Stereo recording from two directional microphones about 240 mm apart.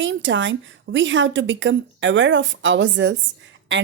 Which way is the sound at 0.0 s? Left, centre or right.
Right.